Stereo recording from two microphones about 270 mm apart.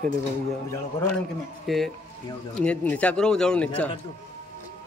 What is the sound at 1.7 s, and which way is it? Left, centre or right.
A man's voice, centre.